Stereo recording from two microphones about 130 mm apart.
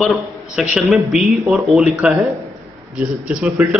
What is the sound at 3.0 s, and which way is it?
Speech, 10° right (ahead or behind).